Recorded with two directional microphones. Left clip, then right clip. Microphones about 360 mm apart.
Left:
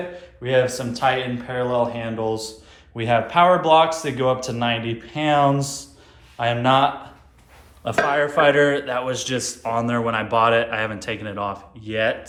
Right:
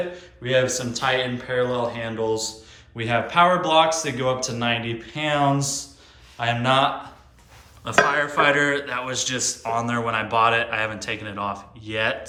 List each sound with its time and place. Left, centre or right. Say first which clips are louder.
0.2 s a man's voice: left 3 dB; centre
8.1 s a man's voice: left 3 dB; centre